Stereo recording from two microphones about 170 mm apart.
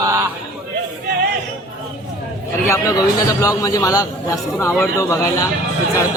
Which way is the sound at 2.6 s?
20° left (ahead or behind).